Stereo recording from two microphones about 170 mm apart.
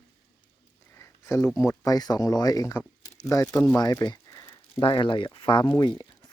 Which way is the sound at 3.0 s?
20° left (ahead or behind).